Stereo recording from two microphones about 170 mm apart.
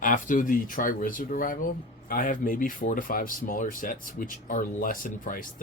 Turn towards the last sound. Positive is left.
turn(degrees=50)  # may be behind; listen again after turning